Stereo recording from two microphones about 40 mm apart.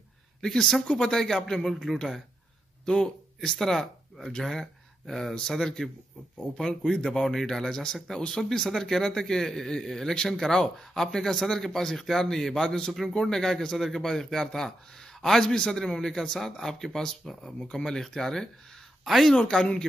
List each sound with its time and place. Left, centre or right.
0.4 s speech: centre
0.8 s a man's voice: centre
2.8 s speech: left
3.3 s a man's voice: centre
17.6 s a man's voice: centre
19.0 s speech: centre
19.5 s a man's voice: centre